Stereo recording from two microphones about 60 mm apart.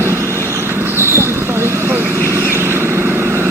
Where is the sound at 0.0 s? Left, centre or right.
Right.